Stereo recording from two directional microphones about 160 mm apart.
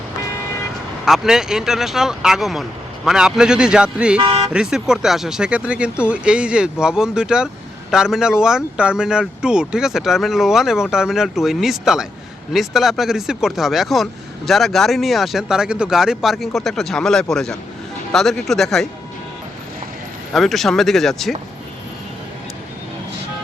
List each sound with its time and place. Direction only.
1.0 s speech: centre (ahead or behind)
4.2 s speech: 30° right (ahead or behind)
4.5 s speech: 5° right (ahead or behind)
20.3 s speech: centre (ahead or behind)